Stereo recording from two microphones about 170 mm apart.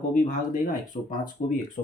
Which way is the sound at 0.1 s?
50° left (ahead or behind).